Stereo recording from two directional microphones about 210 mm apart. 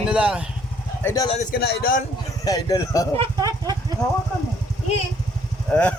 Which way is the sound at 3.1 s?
20° right (ahead or behind).